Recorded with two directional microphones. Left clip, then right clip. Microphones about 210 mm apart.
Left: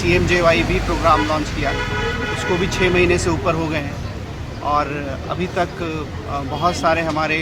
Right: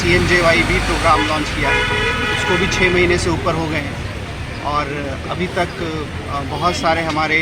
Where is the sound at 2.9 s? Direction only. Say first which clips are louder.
Right 1 dB; 25° left (ahead or behind).